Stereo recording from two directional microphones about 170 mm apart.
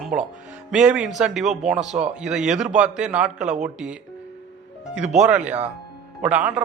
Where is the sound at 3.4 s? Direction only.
45° right (ahead or behind).